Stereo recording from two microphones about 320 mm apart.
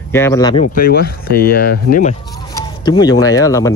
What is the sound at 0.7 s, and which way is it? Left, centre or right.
Speech, left.